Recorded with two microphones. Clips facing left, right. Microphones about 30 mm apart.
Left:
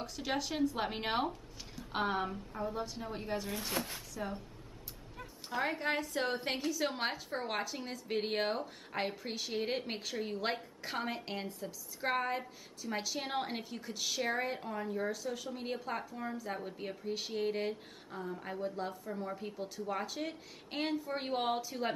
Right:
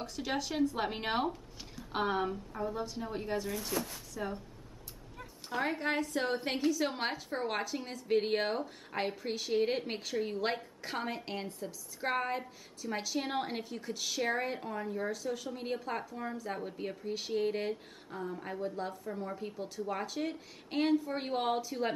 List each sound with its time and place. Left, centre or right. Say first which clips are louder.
0.0 s a woman's voice: right 1 dB; centre
3.7 s speech: even; left
4.1 s speech: right 3 dB; centre
5.5 s a woman's voice: right 1 dB; centre